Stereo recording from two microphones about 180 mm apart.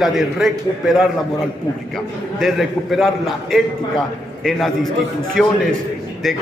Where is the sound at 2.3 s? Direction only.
Centre (ahead or behind).